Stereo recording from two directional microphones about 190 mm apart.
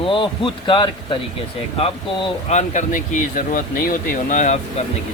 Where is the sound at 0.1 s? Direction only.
25° left (ahead or behind); by 4.5 s 40° left (ahead or behind).